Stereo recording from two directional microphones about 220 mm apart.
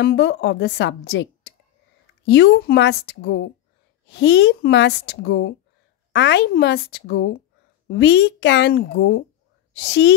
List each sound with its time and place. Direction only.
0.0 s a woman's voice: 50° left (ahead or behind)